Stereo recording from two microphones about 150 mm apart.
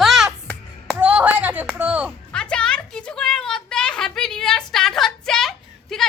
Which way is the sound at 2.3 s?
5° left (ahead or behind).